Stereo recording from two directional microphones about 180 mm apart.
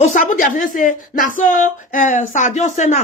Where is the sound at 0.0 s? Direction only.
45° left (ahead or behind).